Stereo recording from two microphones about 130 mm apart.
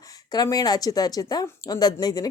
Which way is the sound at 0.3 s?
30° left (ahead or behind).